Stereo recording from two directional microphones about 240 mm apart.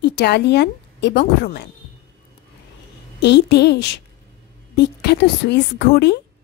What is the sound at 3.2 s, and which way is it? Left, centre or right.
A woman's voice, left.